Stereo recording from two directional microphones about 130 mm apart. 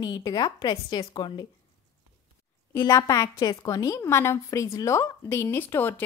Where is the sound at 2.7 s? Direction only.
25° left (ahead or behind).